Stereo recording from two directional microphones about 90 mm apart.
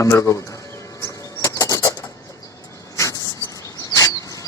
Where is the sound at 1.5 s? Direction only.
40° left (ahead or behind).